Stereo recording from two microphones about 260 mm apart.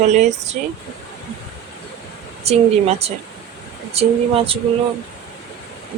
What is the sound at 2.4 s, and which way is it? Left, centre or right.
Speech, right.